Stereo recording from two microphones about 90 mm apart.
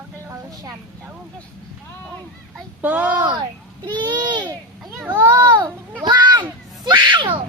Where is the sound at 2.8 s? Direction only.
20° right (ahead or behind).